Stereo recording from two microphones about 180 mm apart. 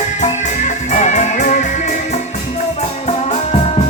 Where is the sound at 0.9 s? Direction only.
40° left (ahead or behind).